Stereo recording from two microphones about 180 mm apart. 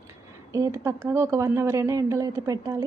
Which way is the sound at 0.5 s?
15° right (ahead or behind).